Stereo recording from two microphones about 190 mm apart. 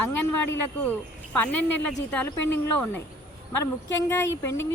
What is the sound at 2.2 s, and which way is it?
Speech, 10° left (ahead or behind).